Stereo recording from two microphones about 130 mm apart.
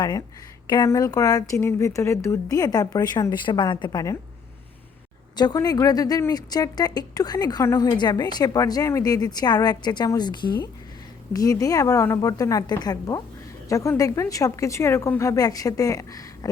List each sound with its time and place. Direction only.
0.0 s speech: 30° left (ahead or behind)
5.4 s a woman's voice: 30° left (ahead or behind)